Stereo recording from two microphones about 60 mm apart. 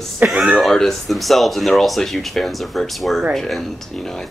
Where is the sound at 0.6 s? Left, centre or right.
Centre.